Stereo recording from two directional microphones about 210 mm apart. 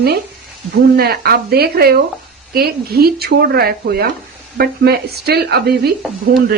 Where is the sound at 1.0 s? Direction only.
45° right (ahead or behind).